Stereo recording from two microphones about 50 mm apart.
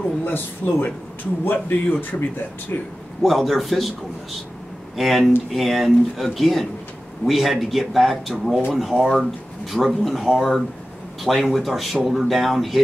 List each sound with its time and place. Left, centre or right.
0.2 s speech: left
3.2 s speech: centre
4.9 s speech: centre